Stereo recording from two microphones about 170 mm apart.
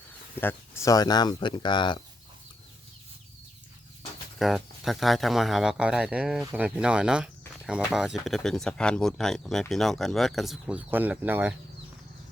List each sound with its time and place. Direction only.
0.3 s speech: 15° left (ahead or behind)
4.4 s speech: centre (ahead or behind)